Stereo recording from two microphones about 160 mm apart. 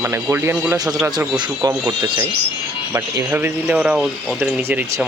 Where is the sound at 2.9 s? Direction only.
15° right (ahead or behind).